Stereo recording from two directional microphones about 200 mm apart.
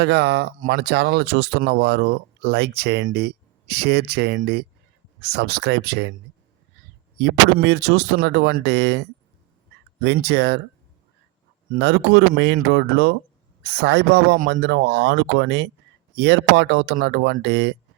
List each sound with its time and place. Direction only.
0.0 s speech: 55° right (ahead or behind)
7.2 s speech: 60° right (ahead or behind)
11.7 s speech: 55° right (ahead or behind)